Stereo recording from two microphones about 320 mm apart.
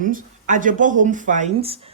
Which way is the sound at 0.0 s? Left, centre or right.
Right.